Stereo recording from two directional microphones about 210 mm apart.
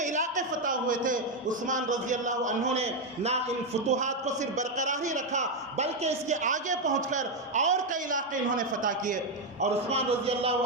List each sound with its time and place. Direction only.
0.0 s a man's voice: 35° right (ahead or behind)